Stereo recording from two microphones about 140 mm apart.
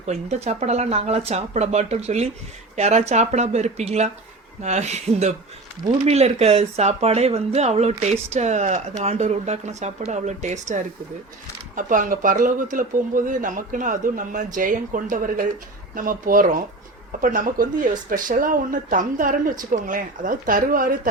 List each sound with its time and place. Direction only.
0.0 s speech: 50° right (ahead or behind)
11.7 s speech: 70° right (ahead or behind)